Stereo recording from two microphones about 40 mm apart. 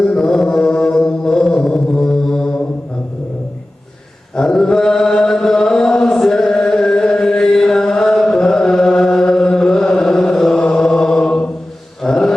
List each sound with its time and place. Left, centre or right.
0.2 s mantra: centre
4.4 s mantra: centre
10.6 s chant: centre
12.0 s mantra: centre